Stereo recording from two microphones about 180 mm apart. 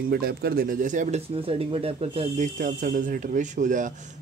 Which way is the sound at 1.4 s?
35° right (ahead or behind).